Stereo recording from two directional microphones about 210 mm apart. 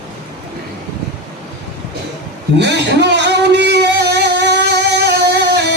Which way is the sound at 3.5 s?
55° right (ahead or behind).